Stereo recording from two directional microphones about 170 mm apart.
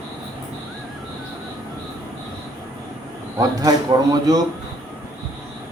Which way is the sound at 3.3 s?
20° right (ahead or behind).